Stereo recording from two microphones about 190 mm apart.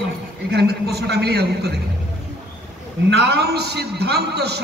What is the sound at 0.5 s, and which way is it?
A man's voice, 60° right (ahead or behind).